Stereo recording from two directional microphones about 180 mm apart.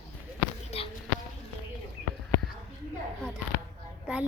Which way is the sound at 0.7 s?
35° left (ahead or behind).